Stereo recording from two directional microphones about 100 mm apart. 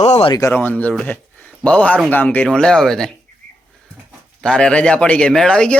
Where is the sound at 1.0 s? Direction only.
15° left (ahead or behind).